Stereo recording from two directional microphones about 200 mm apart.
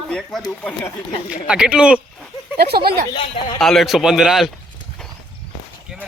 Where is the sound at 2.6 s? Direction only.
50° right (ahead or behind).